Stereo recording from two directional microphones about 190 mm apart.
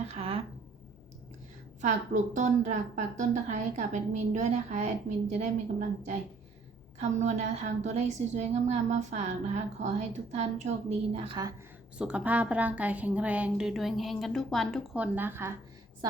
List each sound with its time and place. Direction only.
0.1 s a sound: 30° right (ahead or behind)
1.8 s a woman's voice: 40° right (ahead or behind)
7.2 s a woman's voice: 35° right (ahead or behind)
11.9 s a woman's voice: 5° right (ahead or behind)